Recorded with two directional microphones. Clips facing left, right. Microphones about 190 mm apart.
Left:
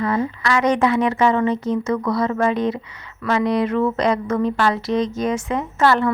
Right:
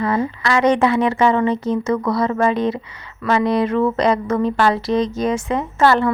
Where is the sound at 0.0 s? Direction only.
30° right (ahead or behind).